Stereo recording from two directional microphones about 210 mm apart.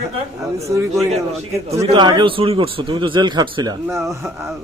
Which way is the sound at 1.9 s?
20° right (ahead or behind).